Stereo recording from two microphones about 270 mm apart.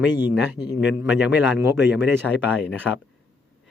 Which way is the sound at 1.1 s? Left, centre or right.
Centre.